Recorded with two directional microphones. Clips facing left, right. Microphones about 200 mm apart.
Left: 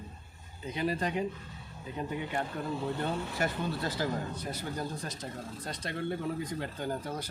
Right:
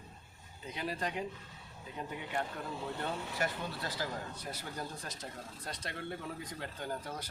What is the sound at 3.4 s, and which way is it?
Speech, 25° left (ahead or behind).